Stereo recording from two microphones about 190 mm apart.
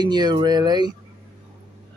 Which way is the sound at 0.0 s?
20° right (ahead or behind).